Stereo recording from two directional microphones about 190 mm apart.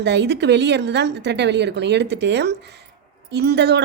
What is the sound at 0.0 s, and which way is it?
A woman's voice, 65° right (ahead or behind).